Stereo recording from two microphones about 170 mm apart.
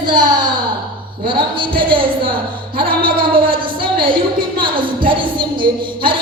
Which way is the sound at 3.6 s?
30° right (ahead or behind).